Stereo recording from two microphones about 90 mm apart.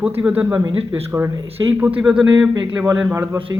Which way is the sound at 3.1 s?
30° right (ahead or behind).